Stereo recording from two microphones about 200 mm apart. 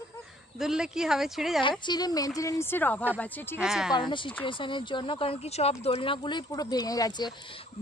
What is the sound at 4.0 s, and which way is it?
Speech, 25° left (ahead or behind).